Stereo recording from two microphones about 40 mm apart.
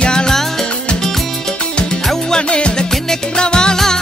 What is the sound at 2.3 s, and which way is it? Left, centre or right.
Music, left.